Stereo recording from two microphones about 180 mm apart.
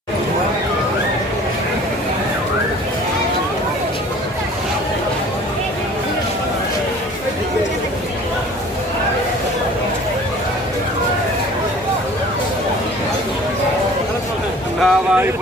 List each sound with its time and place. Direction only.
14.8 s vehicle: centre (ahead or behind)